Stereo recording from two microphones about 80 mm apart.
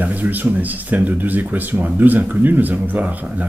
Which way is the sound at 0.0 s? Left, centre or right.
Right.